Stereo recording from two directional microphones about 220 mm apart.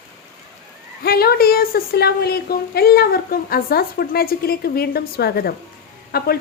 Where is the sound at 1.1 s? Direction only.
45° left (ahead or behind).